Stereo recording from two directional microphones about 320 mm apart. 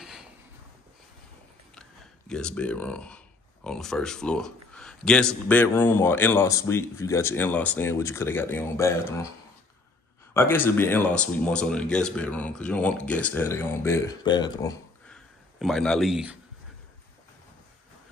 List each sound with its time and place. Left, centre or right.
0.0 s a sound: centre
1.8 s a man's voice: centre
10.3 s speech: centre